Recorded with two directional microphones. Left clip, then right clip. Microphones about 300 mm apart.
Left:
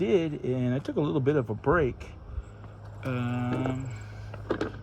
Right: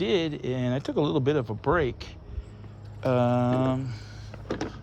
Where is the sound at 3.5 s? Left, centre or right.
Centre.